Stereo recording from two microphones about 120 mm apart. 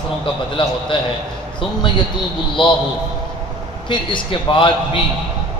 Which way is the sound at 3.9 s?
40° left (ahead or behind).